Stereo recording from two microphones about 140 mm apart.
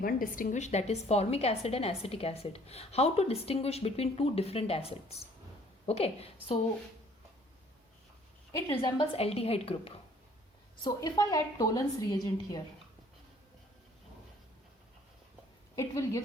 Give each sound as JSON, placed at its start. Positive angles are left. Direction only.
{"t": 0.0, "sound": "a woman's voice", "side_deg": 75}
{"t": 8.8, "sound": "a woman's voice", "side_deg": 40}
{"t": 10.8, "sound": "a woman's voice", "side_deg": 25}
{"t": 15.7, "sound": "a woman's voice", "side_deg": 20}